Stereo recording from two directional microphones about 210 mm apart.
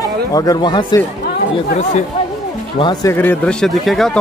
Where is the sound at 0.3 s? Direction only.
15° left (ahead or behind).